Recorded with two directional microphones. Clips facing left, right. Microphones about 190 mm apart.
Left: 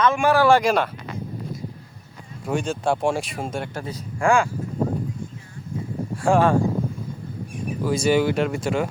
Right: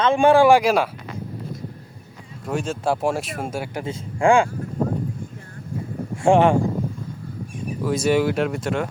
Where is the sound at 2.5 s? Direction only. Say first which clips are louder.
Even; centre (ahead or behind).